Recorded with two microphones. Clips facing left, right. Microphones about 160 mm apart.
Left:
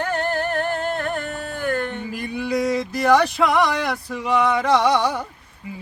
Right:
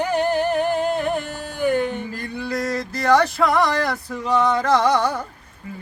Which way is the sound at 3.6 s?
Centre (ahead or behind).